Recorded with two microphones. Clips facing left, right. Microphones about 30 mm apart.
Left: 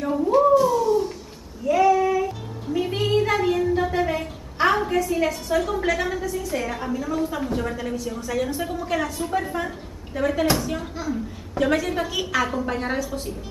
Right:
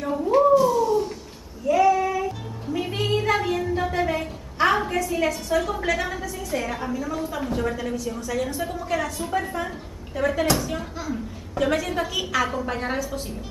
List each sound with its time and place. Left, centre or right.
0.0 s a sound: centre
1.7 s music: centre
3.4 s a woman's voice: centre